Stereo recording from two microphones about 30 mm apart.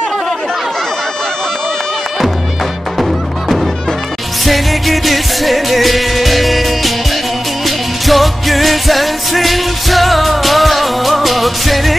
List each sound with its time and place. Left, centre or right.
3.0 s music: centre